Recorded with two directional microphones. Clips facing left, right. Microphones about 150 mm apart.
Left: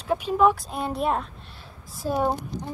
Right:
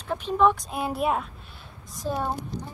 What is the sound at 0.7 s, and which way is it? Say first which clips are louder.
Speech: even; 5° right (ahead or behind).